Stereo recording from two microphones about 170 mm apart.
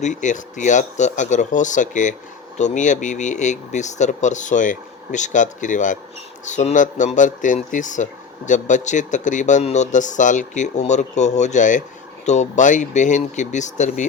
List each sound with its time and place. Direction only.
0.0 s speech: 45° left (ahead or behind)